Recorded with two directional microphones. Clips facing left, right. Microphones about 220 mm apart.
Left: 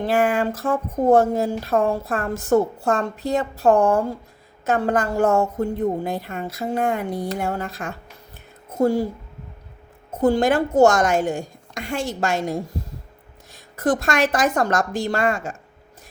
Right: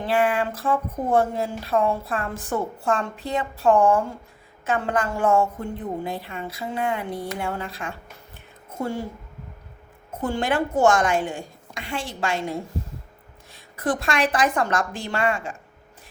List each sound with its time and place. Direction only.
0.0 s a woman's voice: 45° left (ahead or behind)
10.2 s a woman's voice: 40° left (ahead or behind)